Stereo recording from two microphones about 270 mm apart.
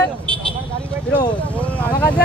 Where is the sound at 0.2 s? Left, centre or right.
Centre.